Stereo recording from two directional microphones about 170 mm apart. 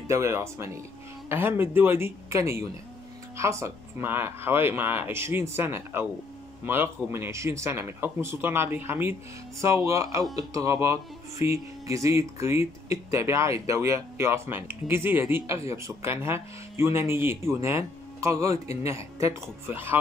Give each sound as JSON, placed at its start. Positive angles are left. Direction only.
{"t": 0.1, "sound": "speech", "side_deg": -15}
{"t": 18.5, "sound": "a man's voice", "side_deg": 40}
{"t": 18.9, "sound": "speech", "side_deg": -15}